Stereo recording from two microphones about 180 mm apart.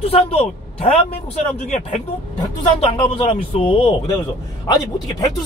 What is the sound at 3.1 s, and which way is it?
Speech, 30° left (ahead or behind).